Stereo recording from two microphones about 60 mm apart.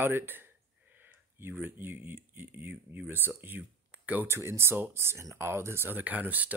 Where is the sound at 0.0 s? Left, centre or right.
Right.